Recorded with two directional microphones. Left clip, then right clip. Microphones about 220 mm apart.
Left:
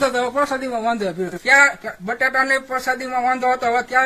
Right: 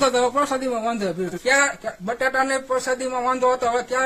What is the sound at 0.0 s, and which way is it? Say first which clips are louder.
A man's voice: even; 10° right (ahead or behind).